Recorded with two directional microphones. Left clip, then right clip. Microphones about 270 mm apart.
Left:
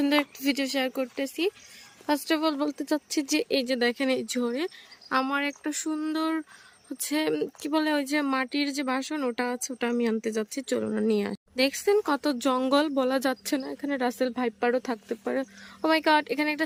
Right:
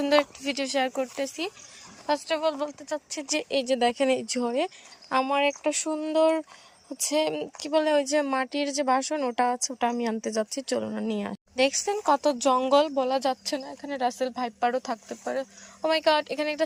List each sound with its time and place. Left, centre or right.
0.0 s a woman's voice: centre